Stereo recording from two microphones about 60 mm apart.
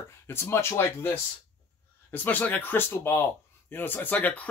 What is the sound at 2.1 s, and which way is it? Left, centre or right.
Speech, left.